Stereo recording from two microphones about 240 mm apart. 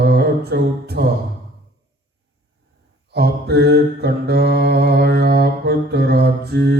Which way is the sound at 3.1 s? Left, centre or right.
Right.